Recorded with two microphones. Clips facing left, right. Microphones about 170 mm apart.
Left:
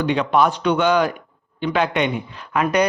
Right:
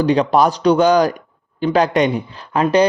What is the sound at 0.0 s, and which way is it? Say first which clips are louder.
A man's voice: right 4 dB; 35° right (ahead or behind).